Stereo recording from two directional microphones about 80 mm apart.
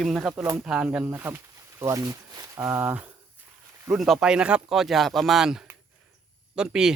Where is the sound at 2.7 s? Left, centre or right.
Right.